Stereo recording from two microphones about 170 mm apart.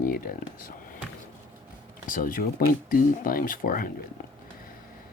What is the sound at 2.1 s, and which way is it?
Speech, 55° left (ahead or behind).